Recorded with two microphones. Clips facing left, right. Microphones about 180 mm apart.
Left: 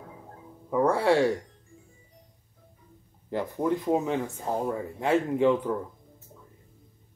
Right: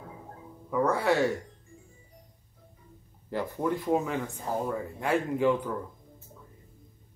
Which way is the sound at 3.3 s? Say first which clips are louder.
Left 2 dB; 20° left (ahead or behind).